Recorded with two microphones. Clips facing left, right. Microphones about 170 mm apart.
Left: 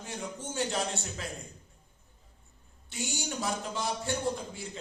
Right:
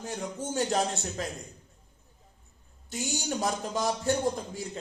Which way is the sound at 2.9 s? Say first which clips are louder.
Right 4 dB; 40° right (ahead or behind).